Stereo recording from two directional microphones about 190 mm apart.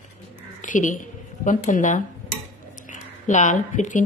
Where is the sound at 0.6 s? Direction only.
40° left (ahead or behind).